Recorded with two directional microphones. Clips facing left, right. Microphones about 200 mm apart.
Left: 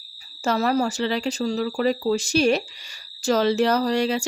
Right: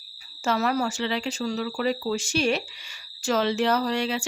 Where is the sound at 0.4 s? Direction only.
35° left (ahead or behind).